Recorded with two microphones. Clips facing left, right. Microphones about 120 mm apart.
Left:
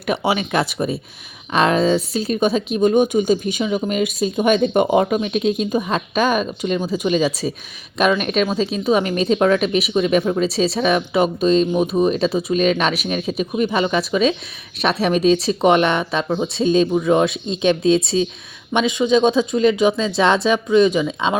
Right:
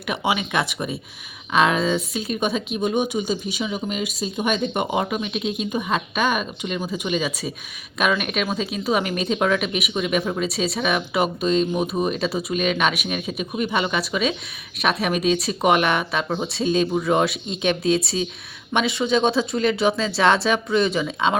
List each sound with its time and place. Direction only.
0.0 s speech: 35° left (ahead or behind); by 21.3 s 20° left (ahead or behind)